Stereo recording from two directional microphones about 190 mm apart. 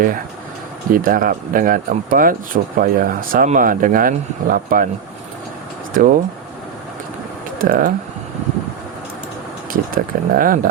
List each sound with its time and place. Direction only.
0.9 s speech: 45° right (ahead or behind)
5.9 s speech: 45° right (ahead or behind)
7.6 s speech: 45° right (ahead or behind)
9.7 s speech: 50° right (ahead or behind)